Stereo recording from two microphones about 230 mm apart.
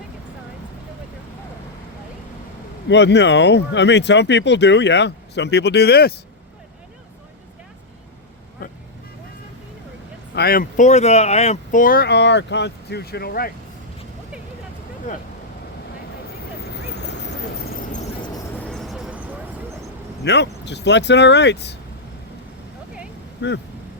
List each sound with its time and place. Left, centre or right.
2.9 s speech: left
10.3 s speech: left
16.6 s vehicle: left
18.6 s vehicle: centre
20.2 s speech: left
23.4 s speech: left